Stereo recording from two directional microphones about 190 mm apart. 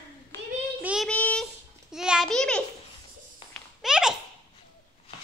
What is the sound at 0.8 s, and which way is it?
A child's voice, centre (ahead or behind).